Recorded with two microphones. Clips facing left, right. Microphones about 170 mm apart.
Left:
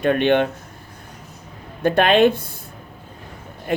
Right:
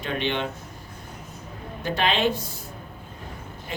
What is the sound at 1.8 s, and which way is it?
Speech, 55° left (ahead or behind).